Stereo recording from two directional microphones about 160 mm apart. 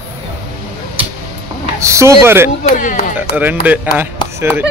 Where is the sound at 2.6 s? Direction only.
55° left (ahead or behind).